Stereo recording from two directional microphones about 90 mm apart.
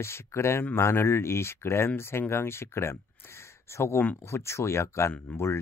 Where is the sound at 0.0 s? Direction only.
30° left (ahead or behind).